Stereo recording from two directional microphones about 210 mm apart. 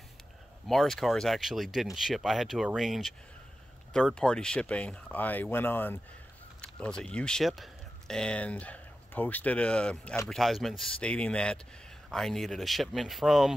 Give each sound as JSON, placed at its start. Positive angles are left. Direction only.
{"t": 0.7, "sound": "speech", "side_deg": 0}